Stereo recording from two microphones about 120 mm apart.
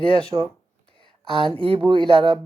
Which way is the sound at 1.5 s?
50° right (ahead or behind).